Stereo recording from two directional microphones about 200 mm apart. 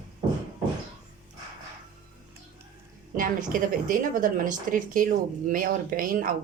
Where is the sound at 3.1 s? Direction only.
45° right (ahead or behind).